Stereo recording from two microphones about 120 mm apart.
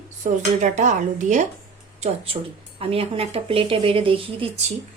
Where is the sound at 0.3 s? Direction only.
90° right.